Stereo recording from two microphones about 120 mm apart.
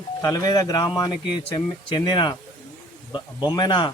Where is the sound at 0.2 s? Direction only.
30° left (ahead or behind).